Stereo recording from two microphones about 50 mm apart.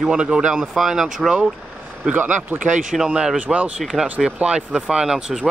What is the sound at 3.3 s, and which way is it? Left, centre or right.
Speech, right.